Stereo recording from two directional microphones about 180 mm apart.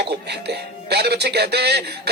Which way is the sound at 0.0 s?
65° right (ahead or behind).